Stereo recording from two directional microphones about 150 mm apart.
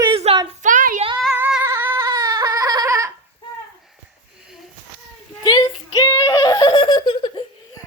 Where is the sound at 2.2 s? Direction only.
25° right (ahead or behind).